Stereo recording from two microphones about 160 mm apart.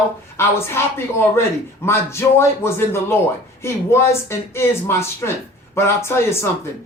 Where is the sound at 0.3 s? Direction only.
15° left (ahead or behind).